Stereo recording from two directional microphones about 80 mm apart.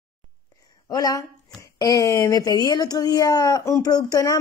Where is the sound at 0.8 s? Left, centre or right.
Left.